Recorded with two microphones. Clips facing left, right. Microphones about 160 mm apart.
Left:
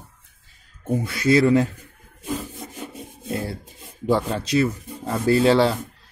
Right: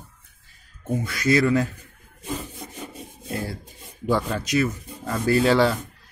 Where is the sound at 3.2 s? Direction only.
25° left (ahead or behind).